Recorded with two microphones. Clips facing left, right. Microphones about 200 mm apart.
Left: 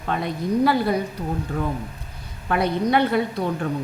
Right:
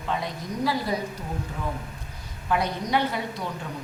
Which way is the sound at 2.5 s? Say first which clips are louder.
Left 5 dB; 60° left (ahead or behind).